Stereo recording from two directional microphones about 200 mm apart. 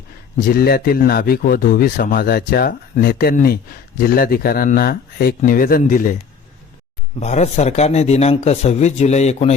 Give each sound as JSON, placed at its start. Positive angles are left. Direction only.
{"t": 0.3, "sound": "speech", "side_deg": 50}
{"t": 7.2, "sound": "speech", "side_deg": 35}